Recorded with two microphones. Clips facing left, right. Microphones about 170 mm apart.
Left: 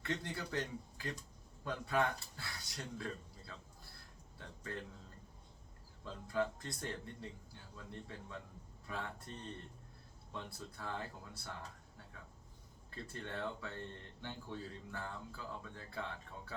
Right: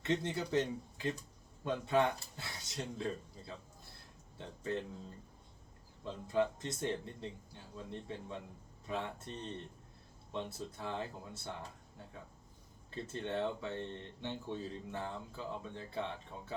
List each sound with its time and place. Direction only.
0.0 s speech: 20° right (ahead or behind)
6.1 s speech: 20° right (ahead or behind)
10.3 s speech: 20° right (ahead or behind)
12.9 s speech: 20° right (ahead or behind)